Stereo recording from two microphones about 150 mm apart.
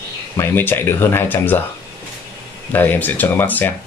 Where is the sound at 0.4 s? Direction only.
15° left (ahead or behind).